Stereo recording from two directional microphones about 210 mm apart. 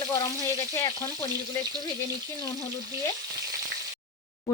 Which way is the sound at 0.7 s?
15° left (ahead or behind).